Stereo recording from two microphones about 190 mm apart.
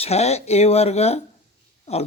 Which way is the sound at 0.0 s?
35° left (ahead or behind).